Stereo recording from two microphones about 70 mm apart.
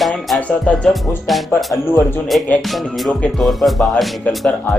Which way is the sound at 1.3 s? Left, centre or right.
Centre.